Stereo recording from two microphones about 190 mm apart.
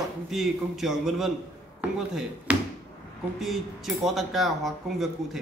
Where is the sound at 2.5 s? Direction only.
5° right (ahead or behind).